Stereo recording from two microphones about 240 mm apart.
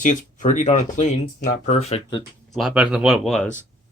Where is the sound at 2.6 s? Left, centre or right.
Centre.